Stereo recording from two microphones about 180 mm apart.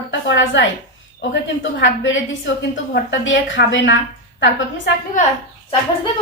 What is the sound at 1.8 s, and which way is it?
A woman's voice, 90° left.